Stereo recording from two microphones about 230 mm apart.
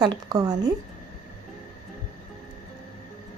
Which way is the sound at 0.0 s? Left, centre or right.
Centre.